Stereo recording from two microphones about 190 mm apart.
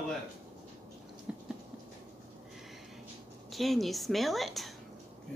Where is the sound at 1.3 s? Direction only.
5° right (ahead or behind).